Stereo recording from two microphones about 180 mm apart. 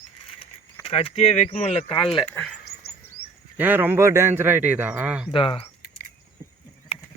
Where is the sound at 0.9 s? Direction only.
30° left (ahead or behind).